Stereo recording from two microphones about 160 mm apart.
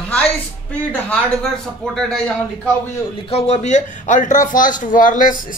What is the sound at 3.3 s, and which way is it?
Speech, 40° left (ahead or behind).